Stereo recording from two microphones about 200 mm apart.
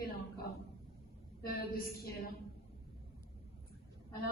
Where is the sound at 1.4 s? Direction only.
50° left (ahead or behind).